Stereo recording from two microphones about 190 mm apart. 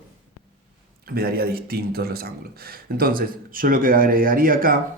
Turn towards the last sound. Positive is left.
turn(degrees=-50)  # may be behind; listen again after turning